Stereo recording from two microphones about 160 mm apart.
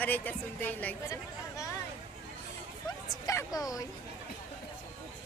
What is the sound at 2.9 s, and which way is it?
Speech, 20° left (ahead or behind).